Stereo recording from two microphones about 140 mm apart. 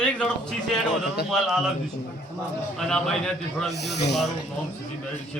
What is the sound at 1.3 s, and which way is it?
Speech, centre (ahead or behind).